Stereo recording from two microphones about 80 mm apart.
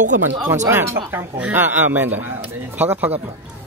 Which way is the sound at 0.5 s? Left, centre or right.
Right.